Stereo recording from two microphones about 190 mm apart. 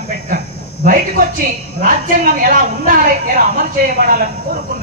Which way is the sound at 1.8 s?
45° right (ahead or behind).